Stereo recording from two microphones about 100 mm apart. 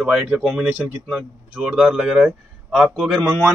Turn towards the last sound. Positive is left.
turn(degrees=5)  # may be behind; listen again after turning